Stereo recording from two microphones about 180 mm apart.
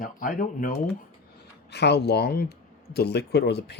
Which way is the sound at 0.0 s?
50° left (ahead or behind).